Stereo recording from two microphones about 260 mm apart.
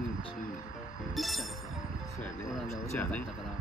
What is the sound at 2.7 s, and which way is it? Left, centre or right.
Speech, centre.